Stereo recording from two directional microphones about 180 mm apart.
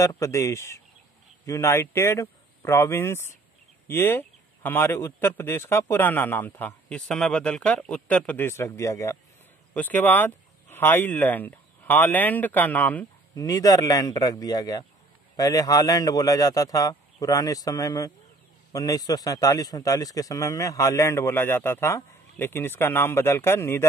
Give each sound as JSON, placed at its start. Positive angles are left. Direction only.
{"t": 0.0, "sound": "a man's voice", "side_deg": 15}